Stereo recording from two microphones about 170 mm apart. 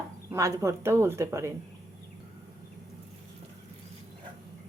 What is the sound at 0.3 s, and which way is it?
Speech, 15° right (ahead or behind).